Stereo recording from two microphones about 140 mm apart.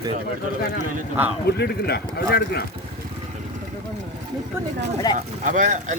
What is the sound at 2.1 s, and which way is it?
Speech, 90° left.